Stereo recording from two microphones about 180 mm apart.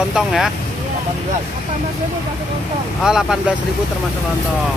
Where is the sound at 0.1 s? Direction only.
Centre (ahead or behind).